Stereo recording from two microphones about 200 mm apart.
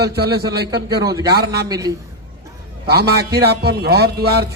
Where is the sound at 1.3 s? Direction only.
55° right (ahead or behind).